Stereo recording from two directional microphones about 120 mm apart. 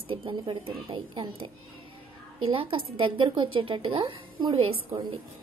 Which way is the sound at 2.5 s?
45° right (ahead or behind).